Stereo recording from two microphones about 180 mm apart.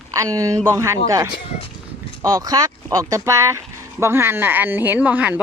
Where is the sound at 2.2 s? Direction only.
15° right (ahead or behind).